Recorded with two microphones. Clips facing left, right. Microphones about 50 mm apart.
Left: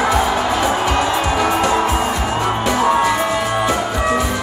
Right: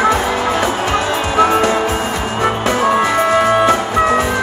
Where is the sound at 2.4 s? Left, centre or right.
Right.